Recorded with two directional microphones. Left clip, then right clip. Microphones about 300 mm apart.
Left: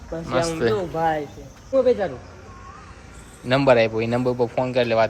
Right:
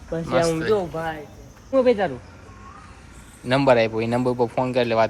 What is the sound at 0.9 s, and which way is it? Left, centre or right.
Speech, centre.